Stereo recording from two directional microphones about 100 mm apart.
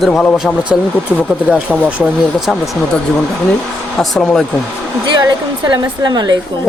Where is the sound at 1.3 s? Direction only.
10° right (ahead or behind).